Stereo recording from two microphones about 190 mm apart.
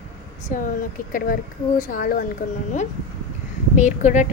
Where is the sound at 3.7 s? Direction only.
40° left (ahead or behind).